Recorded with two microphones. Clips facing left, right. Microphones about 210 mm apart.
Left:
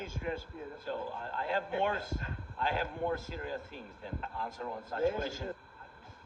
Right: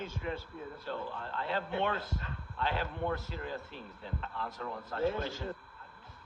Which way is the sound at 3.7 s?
50° left (ahead or behind).